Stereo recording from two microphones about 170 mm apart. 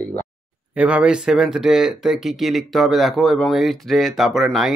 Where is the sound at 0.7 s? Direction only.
5° right (ahead or behind).